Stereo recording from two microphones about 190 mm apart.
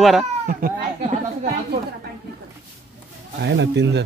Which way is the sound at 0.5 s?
50° right (ahead or behind).